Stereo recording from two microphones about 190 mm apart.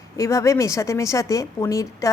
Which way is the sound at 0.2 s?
15° left (ahead or behind).